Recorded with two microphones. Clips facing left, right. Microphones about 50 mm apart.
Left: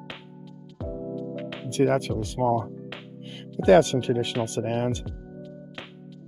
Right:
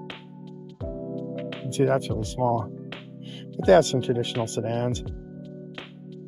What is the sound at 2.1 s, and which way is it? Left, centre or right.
Speech, right.